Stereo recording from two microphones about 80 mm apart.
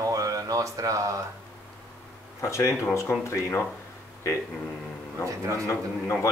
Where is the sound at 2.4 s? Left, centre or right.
Left.